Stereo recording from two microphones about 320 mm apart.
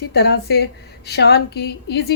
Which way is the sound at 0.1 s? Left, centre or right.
Left.